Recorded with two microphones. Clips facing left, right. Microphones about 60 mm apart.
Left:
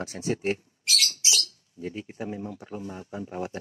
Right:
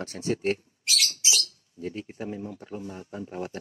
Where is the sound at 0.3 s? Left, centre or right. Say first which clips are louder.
Right 1 dB; centre.